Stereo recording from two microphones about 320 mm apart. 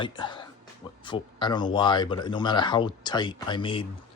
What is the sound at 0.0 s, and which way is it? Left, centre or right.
Speech, centre.